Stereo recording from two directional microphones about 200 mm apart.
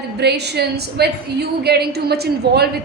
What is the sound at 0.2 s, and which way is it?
A woman's voice, 55° right (ahead or behind).